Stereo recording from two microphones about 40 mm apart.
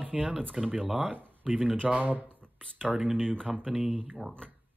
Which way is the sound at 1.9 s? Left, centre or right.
Right.